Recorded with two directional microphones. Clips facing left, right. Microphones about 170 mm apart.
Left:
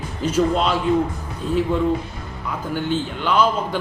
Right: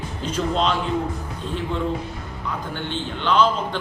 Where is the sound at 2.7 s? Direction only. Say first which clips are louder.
Left 5 dB; 10° left (ahead or behind).